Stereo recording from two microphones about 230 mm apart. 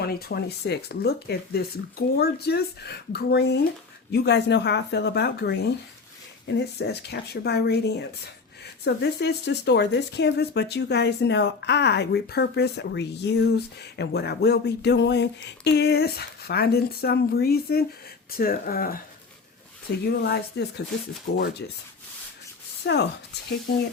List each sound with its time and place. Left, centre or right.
0.1 s speech: left
8.8 s speech: left
20.1 s speech: left
22.8 s speech: left